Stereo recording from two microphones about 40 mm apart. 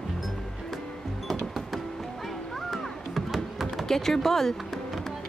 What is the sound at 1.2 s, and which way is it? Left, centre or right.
Music, centre.